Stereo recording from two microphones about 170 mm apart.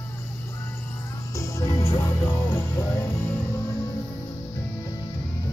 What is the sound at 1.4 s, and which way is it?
Music, 15° left (ahead or behind).